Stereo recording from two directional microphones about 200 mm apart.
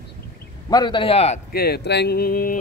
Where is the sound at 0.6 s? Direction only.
20° left (ahead or behind).